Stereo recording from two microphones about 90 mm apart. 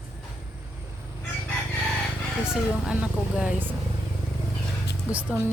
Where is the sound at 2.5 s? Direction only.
10° right (ahead or behind).